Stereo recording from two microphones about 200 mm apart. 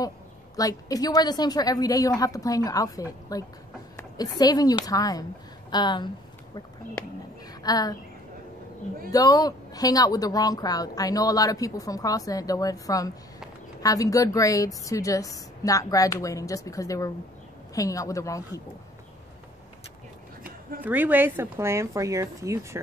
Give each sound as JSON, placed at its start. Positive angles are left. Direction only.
{"t": 0.6, "sound": "a woman's voice", "side_deg": 20}
{"t": 6.5, "sound": "a sound", "side_deg": 20}
{"t": 9.1, "sound": "a woman's voice", "side_deg": 20}
{"t": 20.8, "sound": "speech", "side_deg": -10}